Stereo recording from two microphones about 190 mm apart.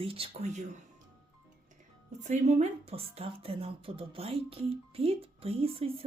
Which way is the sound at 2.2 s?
40° right (ahead or behind).